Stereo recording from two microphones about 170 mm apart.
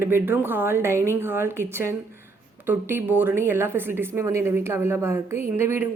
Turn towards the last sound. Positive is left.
turn(degrees=-10)  # may be behind; listen again after turning